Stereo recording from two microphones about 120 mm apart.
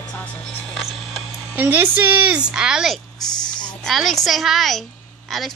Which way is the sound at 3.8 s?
Centre (ahead or behind).